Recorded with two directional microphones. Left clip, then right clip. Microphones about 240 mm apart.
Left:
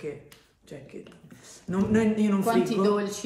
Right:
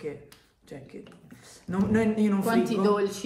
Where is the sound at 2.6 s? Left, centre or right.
Centre.